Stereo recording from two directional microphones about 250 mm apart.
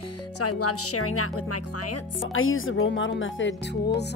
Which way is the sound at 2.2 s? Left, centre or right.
Left.